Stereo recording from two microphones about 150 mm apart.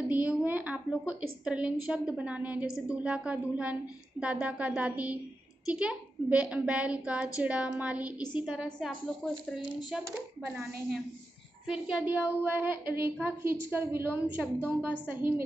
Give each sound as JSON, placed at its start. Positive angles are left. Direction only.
{"t": 0.1, "sound": "a woman's voice", "side_deg": -10}
{"t": 8.2, "sound": "a woman's voice", "side_deg": 30}
{"t": 8.7, "sound": "a woman's voice", "side_deg": 0}